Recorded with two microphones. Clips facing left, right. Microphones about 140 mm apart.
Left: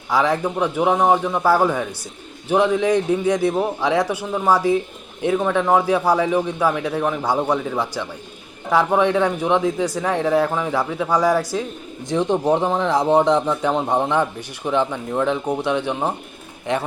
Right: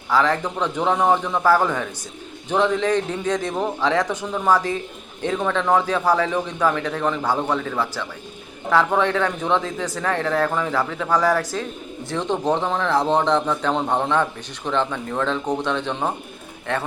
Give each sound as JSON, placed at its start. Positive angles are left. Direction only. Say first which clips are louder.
{"t": 0.1, "sound": "speech", "louder": "left 1 dB", "side_deg": 10}